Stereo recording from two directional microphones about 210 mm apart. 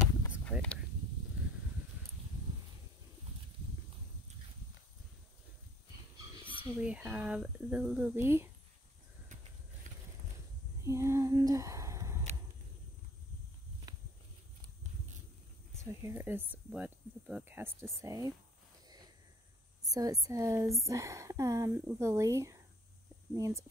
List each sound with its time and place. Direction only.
0.5 s a sound: 5° left (ahead or behind)
6.6 s speech: 5° right (ahead or behind)
10.8 s a sound: 15° right (ahead or behind)
13.9 s walk: 20° right (ahead or behind)
15.8 s speech: 15° right (ahead or behind)
19.9 s speech: 15° right (ahead or behind)